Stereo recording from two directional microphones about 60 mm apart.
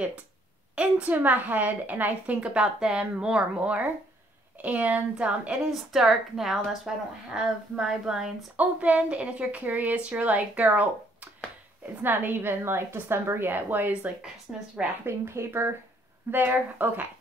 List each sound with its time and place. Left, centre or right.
0.7 s a woman's voice: right
5.7 s a woman's voice: centre
8.5 s a woman's voice: right
12.0 s a woman's voice: right